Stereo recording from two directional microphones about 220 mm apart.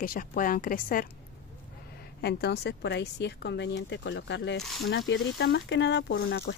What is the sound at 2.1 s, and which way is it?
A woman's voice, 45° left (ahead or behind).